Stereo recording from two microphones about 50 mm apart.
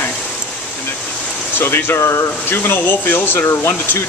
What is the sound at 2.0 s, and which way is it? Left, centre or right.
Speech, left.